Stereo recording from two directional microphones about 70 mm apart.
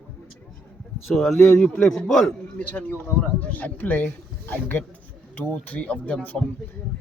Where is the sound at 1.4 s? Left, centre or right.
Centre.